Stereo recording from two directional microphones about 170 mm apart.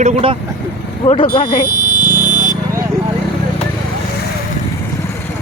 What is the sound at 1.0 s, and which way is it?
Speech, 30° left (ahead or behind).